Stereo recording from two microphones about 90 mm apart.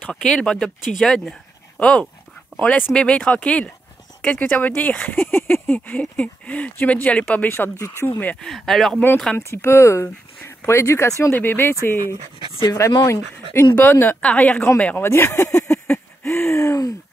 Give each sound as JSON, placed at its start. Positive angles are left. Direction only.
{"t": 0.0, "sound": "speech", "side_deg": 10}
{"t": 7.8, "sound": "speech", "side_deg": 30}
{"t": 8.5, "sound": "speech", "side_deg": 0}
{"t": 9.4, "sound": "speech", "side_deg": 30}
{"t": 12.4, "sound": "speech", "side_deg": -45}
{"t": 12.7, "sound": "speech", "side_deg": 35}
{"t": 13.7, "sound": "speech", "side_deg": 20}
{"t": 15.0, "sound": "speech", "side_deg": 30}
{"t": 15.7, "sound": "a sound", "side_deg": 5}
{"t": 16.3, "sound": "speech", "side_deg": 30}